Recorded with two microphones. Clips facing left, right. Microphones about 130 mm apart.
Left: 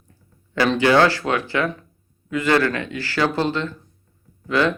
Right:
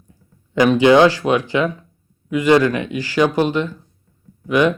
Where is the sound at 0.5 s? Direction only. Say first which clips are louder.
Right 5 dB; 15° right (ahead or behind).